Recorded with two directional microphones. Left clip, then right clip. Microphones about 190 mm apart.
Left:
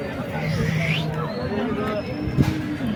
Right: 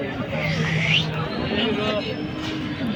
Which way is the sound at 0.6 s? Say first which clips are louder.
Right 5 dB; 60° left (ahead or behind).